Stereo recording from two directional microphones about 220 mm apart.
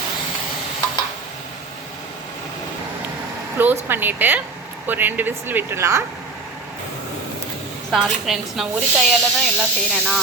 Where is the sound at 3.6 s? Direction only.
10° right (ahead or behind).